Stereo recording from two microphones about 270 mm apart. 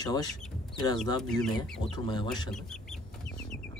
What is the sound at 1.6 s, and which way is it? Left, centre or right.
Speech, centre.